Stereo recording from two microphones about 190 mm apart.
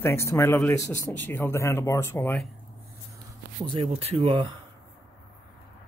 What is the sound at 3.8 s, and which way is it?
Speech, 30° right (ahead or behind).